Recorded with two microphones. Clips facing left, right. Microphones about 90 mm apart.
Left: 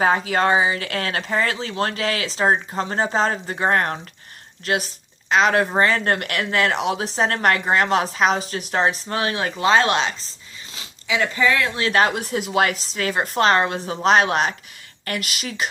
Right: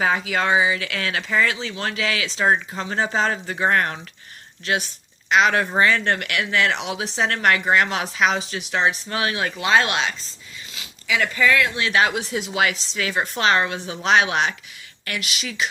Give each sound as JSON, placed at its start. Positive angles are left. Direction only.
{"t": 0.0, "sound": "speech", "side_deg": 40}
{"t": 11.7, "sound": "speech", "side_deg": 40}